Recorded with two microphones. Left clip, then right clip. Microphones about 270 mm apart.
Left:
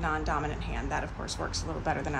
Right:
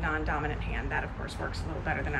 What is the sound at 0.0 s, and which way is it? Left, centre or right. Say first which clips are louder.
Speech: left 1 dB; centre.